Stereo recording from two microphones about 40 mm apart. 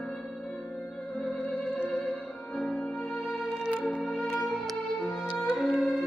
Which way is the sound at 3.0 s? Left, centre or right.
Left.